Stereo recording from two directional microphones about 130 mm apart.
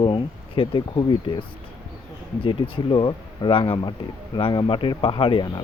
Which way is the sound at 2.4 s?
40° left (ahead or behind).